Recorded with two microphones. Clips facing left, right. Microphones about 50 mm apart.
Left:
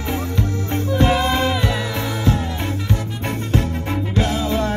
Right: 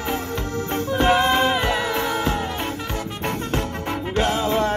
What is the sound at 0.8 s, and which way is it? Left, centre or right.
Music, right.